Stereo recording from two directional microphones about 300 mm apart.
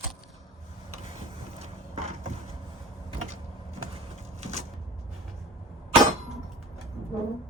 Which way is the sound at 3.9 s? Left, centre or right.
Right.